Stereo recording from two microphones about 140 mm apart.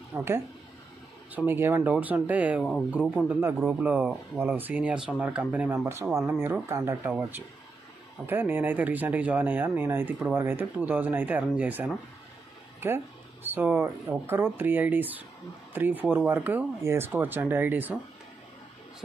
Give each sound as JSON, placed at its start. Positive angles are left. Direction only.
{"t": 0.1, "sound": "speech", "side_deg": -10}
{"t": 1.3, "sound": "speech", "side_deg": -15}